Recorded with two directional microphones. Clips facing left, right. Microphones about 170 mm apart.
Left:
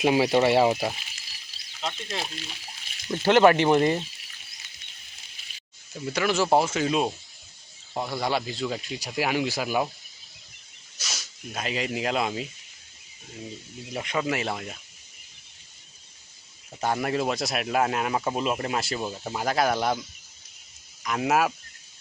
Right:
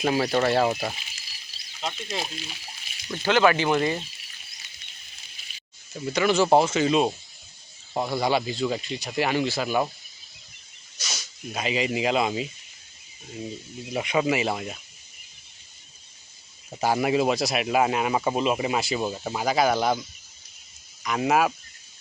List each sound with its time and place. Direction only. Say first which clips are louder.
0.0 s speech: left 2 dB; 15° left (ahead or behind); by 2.3 s 5° right (ahead or behind)
3.1 s speech: left 3 dB; 25° left (ahead or behind)
5.9 s speech: right 3 dB; centre (ahead or behind)
10.9 s speech: right 1 dB; centre (ahead or behind)
13.9 s speech: right 4 dB; 15° right (ahead or behind)
16.8 s speech: right 4 dB; 5° right (ahead or behind)